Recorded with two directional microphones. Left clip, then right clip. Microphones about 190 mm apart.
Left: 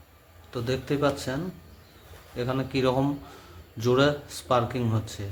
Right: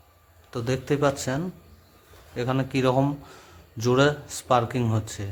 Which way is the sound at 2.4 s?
35° right (ahead or behind).